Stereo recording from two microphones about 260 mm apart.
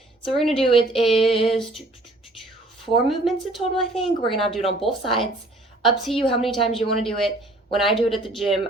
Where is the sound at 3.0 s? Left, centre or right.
Centre.